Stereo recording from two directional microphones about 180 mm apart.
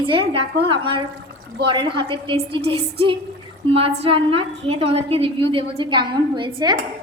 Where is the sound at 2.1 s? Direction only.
30° right (ahead or behind).